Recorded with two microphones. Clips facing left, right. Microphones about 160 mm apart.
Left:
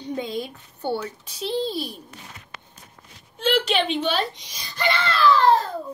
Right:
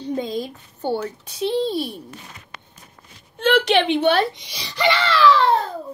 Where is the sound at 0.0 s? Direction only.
40° right (ahead or behind); by 2.0 s 60° right (ahead or behind).